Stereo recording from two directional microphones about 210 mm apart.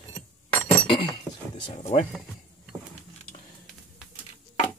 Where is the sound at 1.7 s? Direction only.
35° left (ahead or behind).